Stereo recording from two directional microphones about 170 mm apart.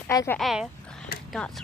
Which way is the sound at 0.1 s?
20° left (ahead or behind).